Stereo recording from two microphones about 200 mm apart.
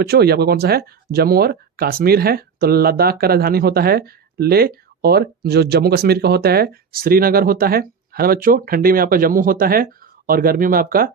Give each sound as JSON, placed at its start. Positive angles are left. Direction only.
{"t": 0.0, "sound": "speech", "side_deg": -50}